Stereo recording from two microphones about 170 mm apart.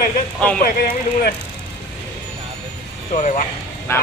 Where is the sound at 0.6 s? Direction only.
60° left (ahead or behind).